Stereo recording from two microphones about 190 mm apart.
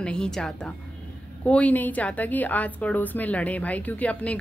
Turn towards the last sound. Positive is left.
turn(degrees=5)  # may be behind; listen again after turning